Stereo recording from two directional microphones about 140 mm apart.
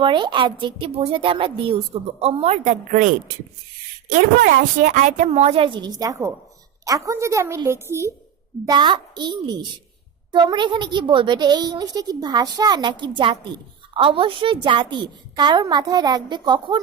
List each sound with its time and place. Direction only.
0.0 s a woman's voice: 35° right (ahead or behind); by 3.1 s 65° right (ahead or behind)
4.4 s a woman's voice: 75° right (ahead or behind); by 8.1 s 20° right (ahead or behind)
8.6 s a woman's voice: 30° right (ahead or behind)